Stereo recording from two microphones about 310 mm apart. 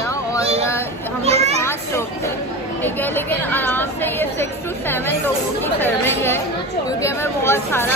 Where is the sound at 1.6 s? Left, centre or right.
Centre.